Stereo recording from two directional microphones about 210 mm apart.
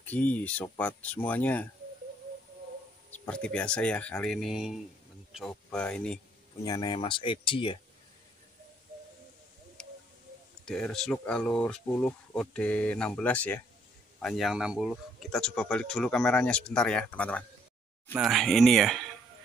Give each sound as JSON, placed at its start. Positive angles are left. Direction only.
{"t": 0.0, "sound": "speech", "side_deg": 5}
{"t": 3.3, "sound": "speech", "side_deg": 5}
{"t": 6.6, "sound": "speech", "side_deg": 20}
{"t": 9.8, "sound": "a sound", "side_deg": 5}
{"t": 10.6, "sound": "speech", "side_deg": 0}